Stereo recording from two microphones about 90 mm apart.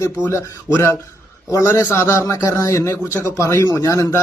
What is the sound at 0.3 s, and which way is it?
A man's voice, 30° left (ahead or behind).